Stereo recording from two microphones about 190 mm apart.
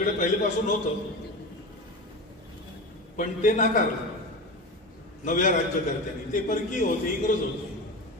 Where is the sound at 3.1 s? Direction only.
40° left (ahead or behind).